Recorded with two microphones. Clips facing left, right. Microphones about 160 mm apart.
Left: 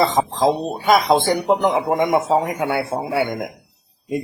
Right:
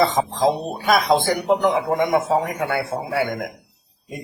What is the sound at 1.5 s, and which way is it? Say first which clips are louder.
A man's voice: right 1 dB; 20° left (ahead or behind).